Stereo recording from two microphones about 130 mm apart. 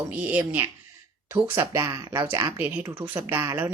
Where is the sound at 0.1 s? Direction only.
15° right (ahead or behind).